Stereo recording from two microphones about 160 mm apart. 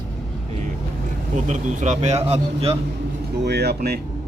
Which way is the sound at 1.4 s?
50° right (ahead or behind).